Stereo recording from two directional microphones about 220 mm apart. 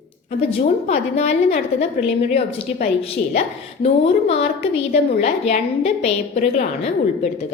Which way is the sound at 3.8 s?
30° left (ahead or behind).